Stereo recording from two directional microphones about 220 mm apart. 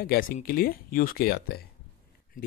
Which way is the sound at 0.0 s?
40° left (ahead or behind).